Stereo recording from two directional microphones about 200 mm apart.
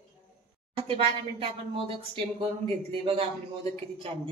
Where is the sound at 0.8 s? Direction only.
30° right (ahead or behind).